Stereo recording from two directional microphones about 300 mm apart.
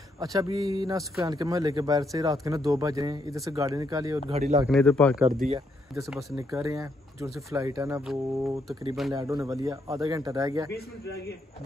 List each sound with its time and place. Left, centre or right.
0.2 s speech: centre
4.6 s speech: centre
5.2 s speech: right
5.9 s speech: centre
9.1 s speech: centre